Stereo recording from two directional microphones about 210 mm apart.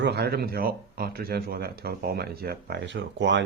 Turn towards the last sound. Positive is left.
turn(degrees=-60)  # may be behind; listen again after turning